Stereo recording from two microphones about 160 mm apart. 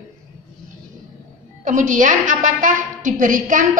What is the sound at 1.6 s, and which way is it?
A woman's voice, 50° right (ahead or behind).